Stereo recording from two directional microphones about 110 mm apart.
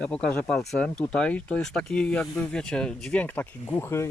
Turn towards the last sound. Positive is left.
turn(degrees=20)  # may be behind; listen again after turning